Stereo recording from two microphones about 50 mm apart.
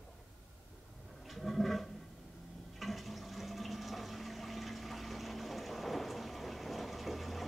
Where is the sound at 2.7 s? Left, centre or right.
Centre.